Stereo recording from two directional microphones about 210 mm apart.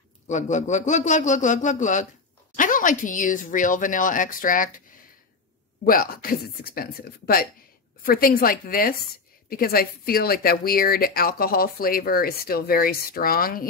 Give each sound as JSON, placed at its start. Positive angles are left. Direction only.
{"t": 0.3, "sound": "speech", "side_deg": 35}
{"t": 5.9, "sound": "speech", "side_deg": 45}